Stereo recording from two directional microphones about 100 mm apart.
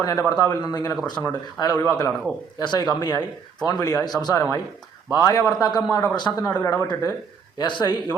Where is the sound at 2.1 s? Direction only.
5° left (ahead or behind).